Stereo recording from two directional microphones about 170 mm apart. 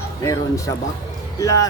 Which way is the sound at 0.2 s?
20° left (ahead or behind).